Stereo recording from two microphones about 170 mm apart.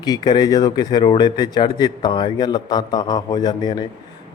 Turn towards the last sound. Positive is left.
turn(degrees=25)  # may be behind; listen again after turning